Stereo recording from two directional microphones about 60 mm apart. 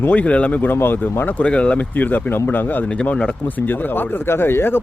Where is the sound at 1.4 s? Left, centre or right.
Centre.